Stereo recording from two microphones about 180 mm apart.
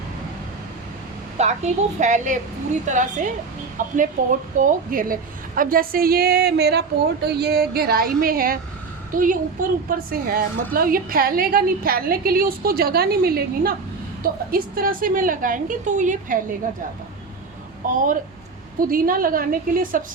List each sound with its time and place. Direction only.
1.4 s a woman's voice: 40° right (ahead or behind)
17.8 s a woman's voice: 50° right (ahead or behind)